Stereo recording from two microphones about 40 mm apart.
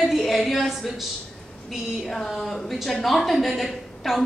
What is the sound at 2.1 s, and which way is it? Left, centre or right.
A woman's voice, centre.